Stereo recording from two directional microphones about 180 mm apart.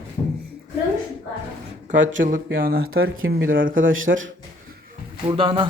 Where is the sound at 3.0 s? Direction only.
90° right.